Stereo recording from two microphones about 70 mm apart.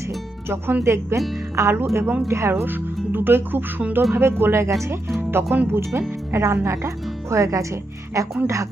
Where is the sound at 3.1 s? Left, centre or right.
Right.